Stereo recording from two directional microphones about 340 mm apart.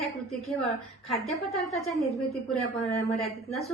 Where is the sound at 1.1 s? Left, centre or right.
Centre.